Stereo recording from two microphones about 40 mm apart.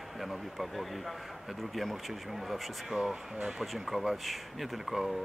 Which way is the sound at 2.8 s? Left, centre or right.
Centre.